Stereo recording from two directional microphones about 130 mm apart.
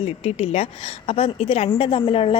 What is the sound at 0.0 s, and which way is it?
A woman's voice, 50° left (ahead or behind).